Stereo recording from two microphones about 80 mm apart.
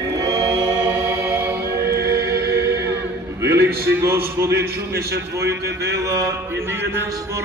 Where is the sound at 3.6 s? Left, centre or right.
Right.